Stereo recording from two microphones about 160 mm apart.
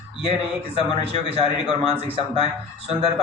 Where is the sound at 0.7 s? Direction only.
40° right (ahead or behind).